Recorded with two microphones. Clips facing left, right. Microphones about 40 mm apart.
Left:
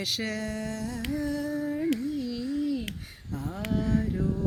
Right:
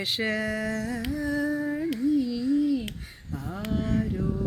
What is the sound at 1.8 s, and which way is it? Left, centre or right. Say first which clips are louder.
Babbling: right 4 dB; centre.